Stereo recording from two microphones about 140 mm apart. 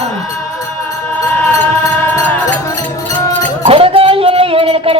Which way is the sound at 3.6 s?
40° right (ahead or behind).